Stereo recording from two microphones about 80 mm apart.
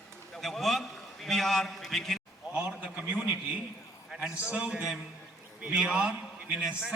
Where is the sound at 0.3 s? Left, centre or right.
Centre.